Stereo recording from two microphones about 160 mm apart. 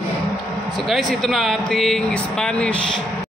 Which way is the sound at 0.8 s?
Centre (ahead or behind).